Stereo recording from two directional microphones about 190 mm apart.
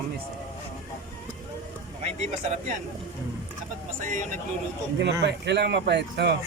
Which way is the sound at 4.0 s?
40° right (ahead or behind).